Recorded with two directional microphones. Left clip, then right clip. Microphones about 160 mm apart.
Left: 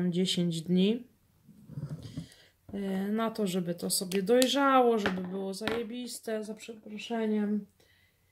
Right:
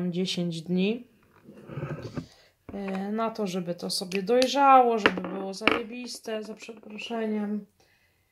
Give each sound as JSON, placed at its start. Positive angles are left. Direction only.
{"t": 0.0, "sound": "speech", "side_deg": 40}
{"t": 2.2, "sound": "speech", "side_deg": 45}